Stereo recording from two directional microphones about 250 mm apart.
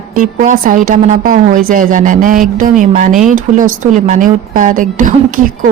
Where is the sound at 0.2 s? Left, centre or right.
Right.